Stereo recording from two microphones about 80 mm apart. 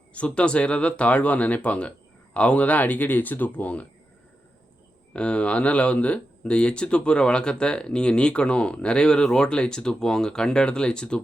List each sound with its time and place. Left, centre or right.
0.1 s speech: centre
5.1 s speech: centre